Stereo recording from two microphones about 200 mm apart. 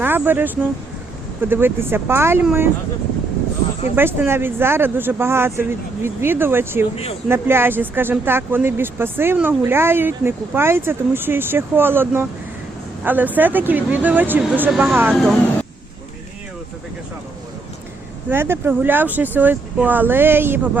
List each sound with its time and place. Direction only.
0.0 s speech: 10° right (ahead or behind)
3.9 s speech: 10° right (ahead or behind)
6.9 s speech: 30° left (ahead or behind)
7.3 s speech: 10° right (ahead or behind)
18.3 s speech: 10° right (ahead or behind)